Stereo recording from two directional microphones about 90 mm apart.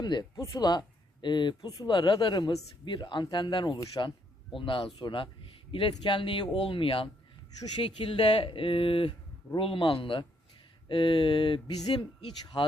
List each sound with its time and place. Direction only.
0.0 s speech: 50° left (ahead or behind)
4.5 s speech: 70° left (ahead or behind)
11.7 s speech: 50° left (ahead or behind)
11.9 s speech: 70° left (ahead or behind)